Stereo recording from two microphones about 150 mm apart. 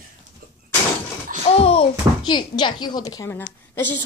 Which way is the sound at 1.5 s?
40° left (ahead or behind).